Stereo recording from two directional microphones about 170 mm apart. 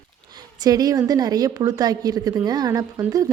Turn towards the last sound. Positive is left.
turn(degrees=-20)  # may be behind; listen again after turning